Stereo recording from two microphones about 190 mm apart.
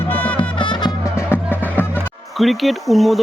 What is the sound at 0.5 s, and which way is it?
Music, 25° left (ahead or behind).